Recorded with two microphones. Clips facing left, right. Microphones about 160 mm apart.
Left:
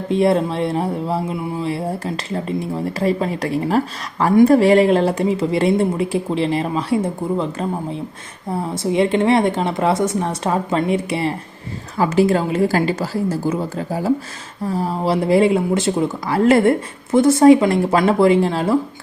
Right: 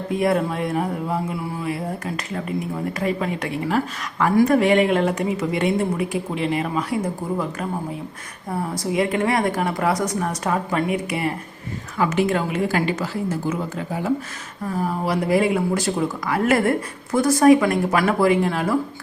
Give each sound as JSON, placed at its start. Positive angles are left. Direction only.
{"t": 0.1, "sound": "a woman's voice", "side_deg": 25}